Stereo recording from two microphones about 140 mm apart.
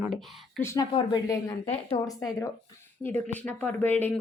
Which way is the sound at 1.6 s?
45° left (ahead or behind).